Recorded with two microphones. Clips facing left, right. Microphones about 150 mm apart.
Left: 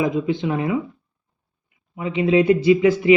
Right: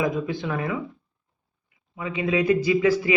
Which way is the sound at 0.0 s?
20° left (ahead or behind).